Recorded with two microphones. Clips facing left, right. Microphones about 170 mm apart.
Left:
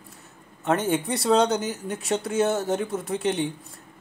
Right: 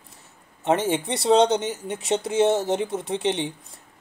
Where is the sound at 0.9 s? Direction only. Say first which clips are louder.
Even; 25° right (ahead or behind).